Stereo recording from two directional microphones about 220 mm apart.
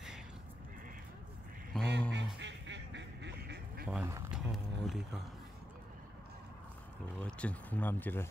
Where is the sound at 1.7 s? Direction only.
5° left (ahead or behind).